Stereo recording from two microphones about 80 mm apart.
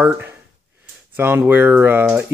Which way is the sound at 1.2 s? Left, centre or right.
Right.